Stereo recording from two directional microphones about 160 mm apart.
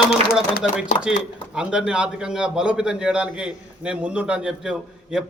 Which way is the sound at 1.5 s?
5° right (ahead or behind).